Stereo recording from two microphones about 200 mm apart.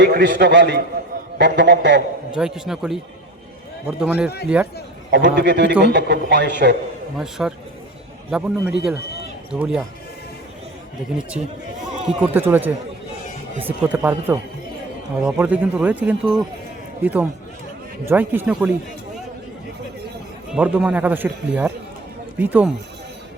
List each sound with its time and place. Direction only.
0.0 s a man's voice: 55° right (ahead or behind)
2.3 s a man's voice: 5° right (ahead or behind)
5.1 s a man's voice: 60° right (ahead or behind)
7.2 s a man's voice: centre (ahead or behind)
12.0 s speech: 10° right (ahead or behind)
20.5 s speech: 5° right (ahead or behind)